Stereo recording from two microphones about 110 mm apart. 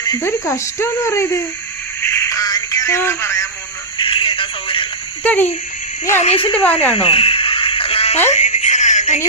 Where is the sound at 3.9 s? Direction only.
50° left (ahead or behind).